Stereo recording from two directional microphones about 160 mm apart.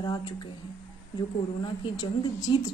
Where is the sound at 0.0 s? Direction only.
25° left (ahead or behind).